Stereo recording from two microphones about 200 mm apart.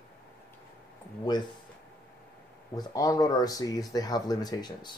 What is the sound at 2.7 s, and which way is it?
Speech, 15° left (ahead or behind).